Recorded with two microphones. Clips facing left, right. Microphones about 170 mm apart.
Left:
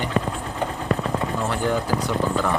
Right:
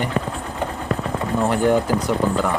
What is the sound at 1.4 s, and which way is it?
Speech, 15° right (ahead or behind).